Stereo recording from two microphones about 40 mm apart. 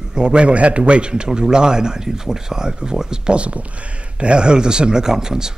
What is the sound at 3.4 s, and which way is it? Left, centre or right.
Speech, right.